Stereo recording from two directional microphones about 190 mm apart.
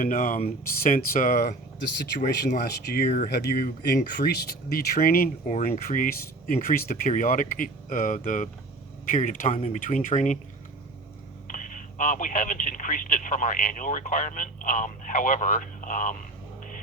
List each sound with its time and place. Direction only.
0.0 s speech: 45° left (ahead or behind); by 2.4 s 65° left (ahead or behind)
2.8 s speech: 55° left (ahead or behind)
11.4 s speech: 45° left (ahead or behind)